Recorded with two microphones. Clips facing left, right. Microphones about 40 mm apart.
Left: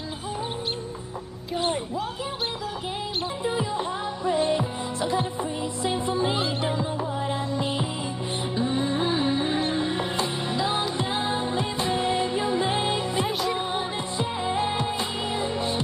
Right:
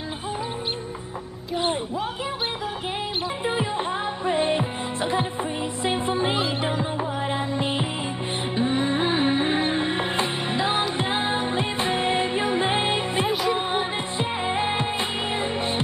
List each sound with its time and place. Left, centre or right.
3.4 s music: right
13.3 s music: centre
13.6 s music: right